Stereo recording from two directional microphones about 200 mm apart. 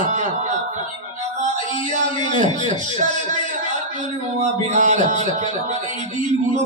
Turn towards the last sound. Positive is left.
turn(degrees=-40)  # may be behind; listen again after turning